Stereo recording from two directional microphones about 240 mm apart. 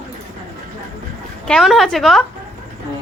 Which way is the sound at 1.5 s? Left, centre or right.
Centre.